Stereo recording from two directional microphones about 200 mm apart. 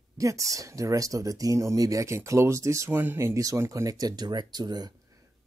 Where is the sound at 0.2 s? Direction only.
15° right (ahead or behind).